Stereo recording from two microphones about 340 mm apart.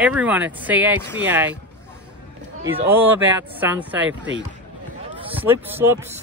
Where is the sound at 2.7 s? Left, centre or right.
Centre.